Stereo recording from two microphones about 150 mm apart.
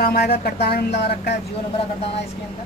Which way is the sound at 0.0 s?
80° left.